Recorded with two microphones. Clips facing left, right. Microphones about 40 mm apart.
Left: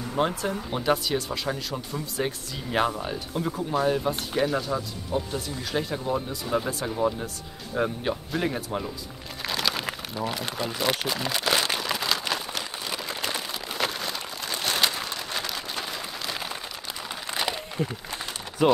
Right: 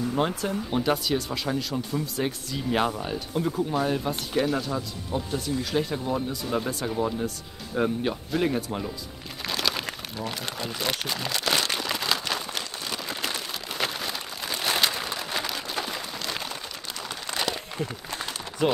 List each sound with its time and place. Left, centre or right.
0.1 s speech: centre
9.4 s crumpling: centre
17.3 s a sound: centre